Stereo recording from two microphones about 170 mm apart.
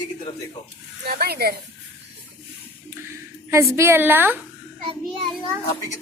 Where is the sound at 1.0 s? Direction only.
65° right (ahead or behind).